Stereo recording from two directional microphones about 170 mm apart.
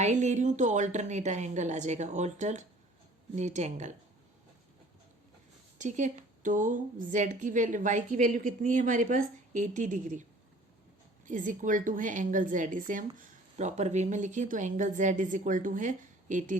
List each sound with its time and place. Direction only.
0.0 s a woman's voice: 45° right (ahead or behind)
5.7 s a woman's voice: 45° right (ahead or behind)
11.3 s a woman's voice: 50° right (ahead or behind)